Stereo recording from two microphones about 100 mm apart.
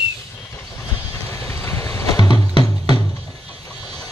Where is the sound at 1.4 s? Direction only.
25° left (ahead or behind).